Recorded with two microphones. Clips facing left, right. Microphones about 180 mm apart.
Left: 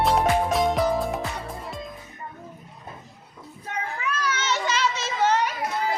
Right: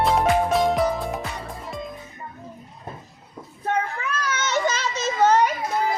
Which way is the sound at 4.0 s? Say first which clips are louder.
Right 1 dB; 45° right (ahead or behind).